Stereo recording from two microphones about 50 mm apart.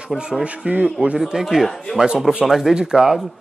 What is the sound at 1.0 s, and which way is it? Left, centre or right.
Speech, right.